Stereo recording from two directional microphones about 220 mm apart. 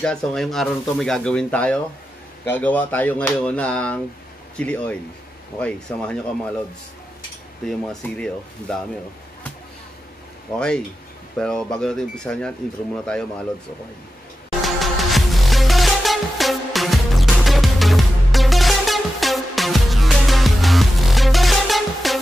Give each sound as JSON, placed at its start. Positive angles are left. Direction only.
{"t": 0.0, "sound": "speech", "side_deg": 5}
{"t": 7.6, "sound": "speech", "side_deg": 5}
{"t": 11.3, "sound": "speech", "side_deg": 5}
{"t": 14.6, "sound": "music", "side_deg": 0}